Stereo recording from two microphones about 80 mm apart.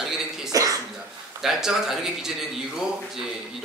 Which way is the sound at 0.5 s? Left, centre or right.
Right.